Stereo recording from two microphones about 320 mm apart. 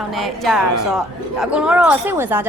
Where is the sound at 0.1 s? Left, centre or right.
Centre.